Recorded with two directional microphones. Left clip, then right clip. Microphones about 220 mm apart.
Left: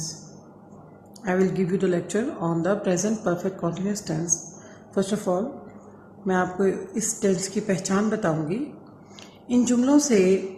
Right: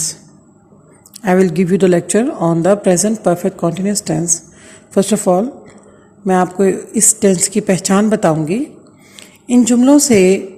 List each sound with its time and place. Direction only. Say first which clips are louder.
1.2 s a woman's voice: right 11 dB; 40° right (ahead or behind)